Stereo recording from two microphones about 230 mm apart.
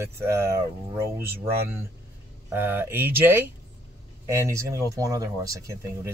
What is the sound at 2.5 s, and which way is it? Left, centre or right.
Speech, centre.